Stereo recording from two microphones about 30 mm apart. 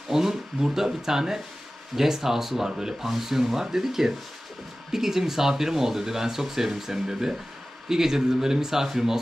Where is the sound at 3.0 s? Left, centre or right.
Centre.